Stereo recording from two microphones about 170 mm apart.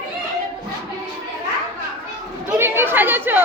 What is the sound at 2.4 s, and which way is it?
Speech, 15° right (ahead or behind).